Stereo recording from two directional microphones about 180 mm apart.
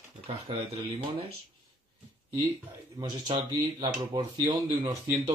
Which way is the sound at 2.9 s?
25° right (ahead or behind).